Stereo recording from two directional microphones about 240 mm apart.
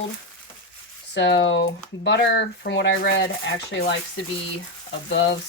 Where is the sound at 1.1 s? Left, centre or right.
Left.